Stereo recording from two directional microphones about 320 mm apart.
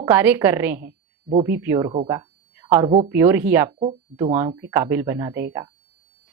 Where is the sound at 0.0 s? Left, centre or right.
Centre.